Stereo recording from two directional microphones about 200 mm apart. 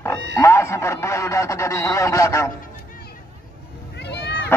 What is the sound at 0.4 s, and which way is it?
Speech, 15° left (ahead or behind).